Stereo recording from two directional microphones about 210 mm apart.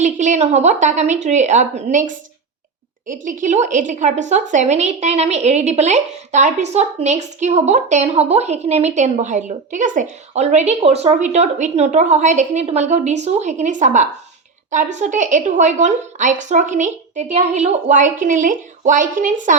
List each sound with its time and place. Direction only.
0.0 s a woman's voice: 35° right (ahead or behind)
3.1 s a woman's voice: 35° right (ahead or behind)